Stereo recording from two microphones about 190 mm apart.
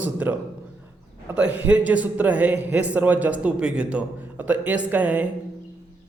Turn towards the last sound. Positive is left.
turn(degrees=-10)  # may be behind; listen again after turning